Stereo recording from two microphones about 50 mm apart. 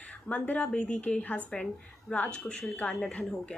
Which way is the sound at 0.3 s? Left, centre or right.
Left.